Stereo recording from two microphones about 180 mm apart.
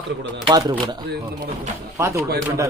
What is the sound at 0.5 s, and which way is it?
A man's voice, 20° right (ahead or behind).